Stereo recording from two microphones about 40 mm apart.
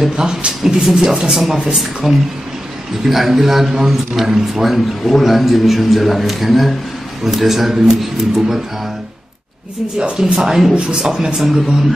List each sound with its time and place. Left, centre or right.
0.2 s speech: centre
1.3 s a man's voice: centre
4.6 s a man's voice: centre
9.9 s a man's voice: centre